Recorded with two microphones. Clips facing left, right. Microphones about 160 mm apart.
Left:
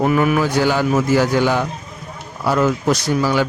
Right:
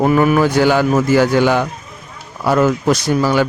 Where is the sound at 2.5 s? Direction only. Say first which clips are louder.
Right 3 dB; 55° right (ahead or behind).